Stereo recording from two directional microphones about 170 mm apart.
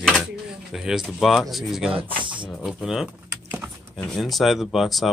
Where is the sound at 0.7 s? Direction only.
Centre (ahead or behind).